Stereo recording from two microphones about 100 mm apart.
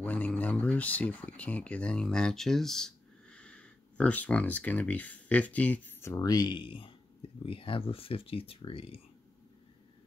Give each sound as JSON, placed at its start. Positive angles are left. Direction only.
{"t": 0.0, "sound": "speech", "side_deg": 15}